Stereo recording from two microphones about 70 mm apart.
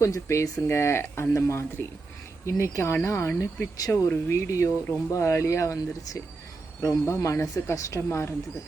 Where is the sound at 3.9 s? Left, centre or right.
Left.